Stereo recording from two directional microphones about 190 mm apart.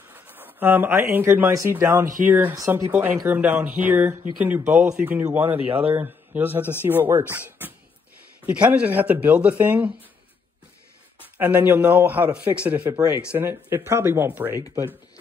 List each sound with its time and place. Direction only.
0.1 s a man's voice: 10° right (ahead or behind)
8.5 s a man's voice: 5° right (ahead or behind)
11.3 s a man's voice: 10° right (ahead or behind)